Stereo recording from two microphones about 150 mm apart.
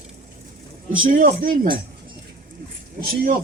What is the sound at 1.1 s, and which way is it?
Speech, 75° right (ahead or behind).